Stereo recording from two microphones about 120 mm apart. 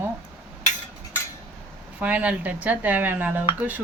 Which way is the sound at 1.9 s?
10° right (ahead or behind).